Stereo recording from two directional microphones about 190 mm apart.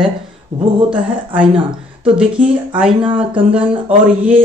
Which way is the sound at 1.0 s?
5° right (ahead or behind).